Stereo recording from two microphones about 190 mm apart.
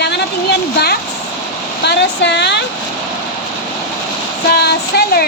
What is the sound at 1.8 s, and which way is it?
Speech, 65° left (ahead or behind).